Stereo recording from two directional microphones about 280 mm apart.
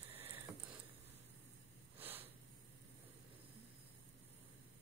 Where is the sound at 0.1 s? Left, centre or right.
Centre.